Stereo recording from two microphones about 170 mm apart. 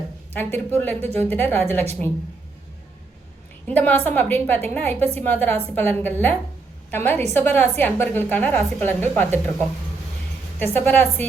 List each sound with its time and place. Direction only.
0.3 s a woman's voice: 10° left (ahead or behind)
0.9 s a woman's voice: 40° right (ahead or behind)
1.3 s a woman's voice: 10° left (ahead or behind)
3.7 s a woman's voice: 10° left (ahead or behind)
10.6 s a woman's voice: 10° left (ahead or behind)